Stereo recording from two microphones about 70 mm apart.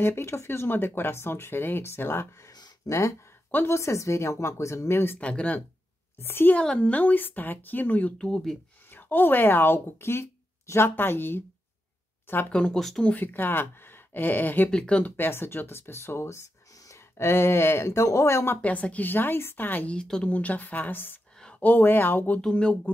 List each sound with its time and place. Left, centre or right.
0.0 s speech: left
2.9 s speech: left
5.2 s speech: centre
6.2 s speech: left
6.5 s speech: centre
8.2 s speech: centre
8.9 s speech: left
12.7 s speech: centre
13.0 s speech: left
14.7 s speech: centre
15.1 s speech: left
18.6 s speech: centre
19.9 s speech: centre
22.4 s speech: centre